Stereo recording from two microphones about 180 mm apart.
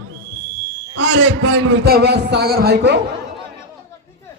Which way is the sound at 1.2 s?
65° right (ahead or behind).